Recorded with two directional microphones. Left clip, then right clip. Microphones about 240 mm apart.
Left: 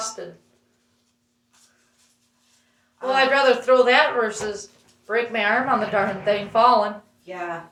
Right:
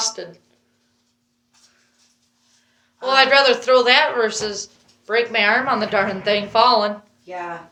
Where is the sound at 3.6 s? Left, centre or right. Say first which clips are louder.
Right 2 dB; right.